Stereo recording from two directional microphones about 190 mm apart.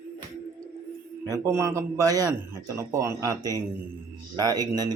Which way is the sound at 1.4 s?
15° right (ahead or behind).